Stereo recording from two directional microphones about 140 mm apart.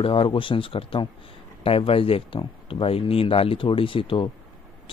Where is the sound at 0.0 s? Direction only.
40° left (ahead or behind).